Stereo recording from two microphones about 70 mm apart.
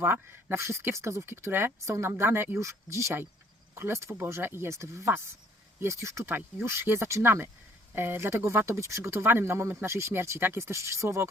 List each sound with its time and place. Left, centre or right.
0.0 s speech: right
2.6 s speech: right
6.2 s speech: right